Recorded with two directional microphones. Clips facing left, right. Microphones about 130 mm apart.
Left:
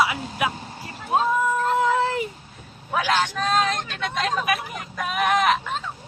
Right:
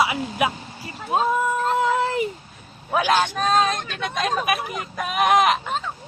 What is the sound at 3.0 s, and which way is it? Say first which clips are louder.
Speech: right 2 dB; 20° right (ahead or behind).